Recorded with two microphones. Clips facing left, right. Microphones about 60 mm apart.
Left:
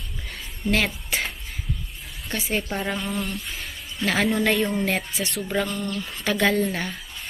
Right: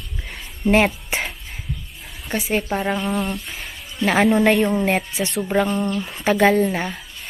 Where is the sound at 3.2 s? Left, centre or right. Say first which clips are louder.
Right 4 dB; centre.